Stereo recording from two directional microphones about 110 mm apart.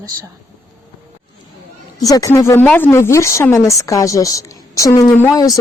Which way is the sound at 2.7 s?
10° left (ahead or behind).